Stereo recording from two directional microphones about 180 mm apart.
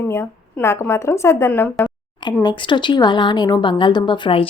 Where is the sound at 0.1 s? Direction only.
15° left (ahead or behind).